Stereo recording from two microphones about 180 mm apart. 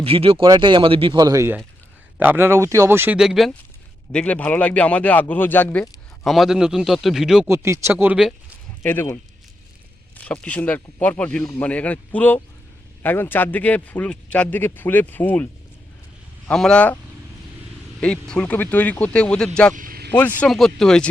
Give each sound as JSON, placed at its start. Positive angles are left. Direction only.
{"t": 0.0, "sound": "a man's voice", "side_deg": -30}
{"t": 6.2, "sound": "speech", "side_deg": 0}
{"t": 7.4, "sound": "speech", "side_deg": -15}
{"t": 8.8, "sound": "speech", "side_deg": 10}
{"t": 10.2, "sound": "speech", "side_deg": 5}
{"t": 16.5, "sound": "speech", "side_deg": 5}
{"t": 18.0, "sound": "speech", "side_deg": 5}
{"t": 19.7, "sound": "vehicle", "side_deg": -50}
{"t": 20.1, "sound": "speech", "side_deg": 10}